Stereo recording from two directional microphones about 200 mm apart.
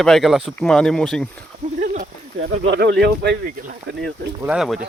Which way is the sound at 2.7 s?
55° right (ahead or behind).